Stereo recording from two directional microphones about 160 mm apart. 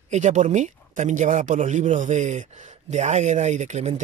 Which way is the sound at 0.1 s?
50° right (ahead or behind).